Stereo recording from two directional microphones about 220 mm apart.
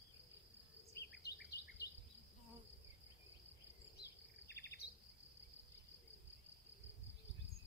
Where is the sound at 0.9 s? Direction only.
50° left (ahead or behind).